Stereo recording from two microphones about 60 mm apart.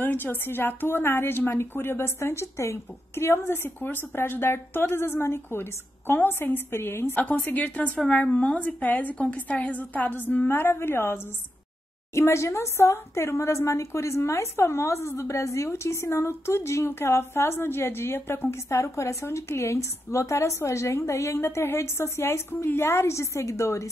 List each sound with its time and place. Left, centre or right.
0.0 s a woman's voice: left
7.2 s a woman's voice: left